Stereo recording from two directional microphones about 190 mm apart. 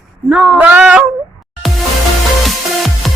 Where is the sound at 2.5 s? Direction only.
Centre (ahead or behind).